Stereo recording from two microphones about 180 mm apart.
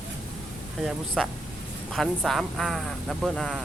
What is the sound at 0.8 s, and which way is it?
A man's voice, centre (ahead or behind).